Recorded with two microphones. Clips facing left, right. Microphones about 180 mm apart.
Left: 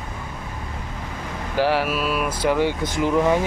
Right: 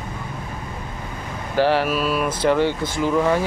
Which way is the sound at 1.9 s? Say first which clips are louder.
Right 2 dB; 40° right (ahead or behind).